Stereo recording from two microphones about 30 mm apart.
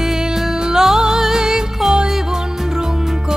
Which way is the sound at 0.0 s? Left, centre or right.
Centre.